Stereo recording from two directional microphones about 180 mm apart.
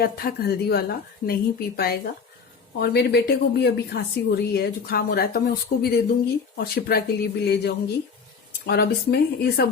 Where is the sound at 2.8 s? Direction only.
65° left (ahead or behind).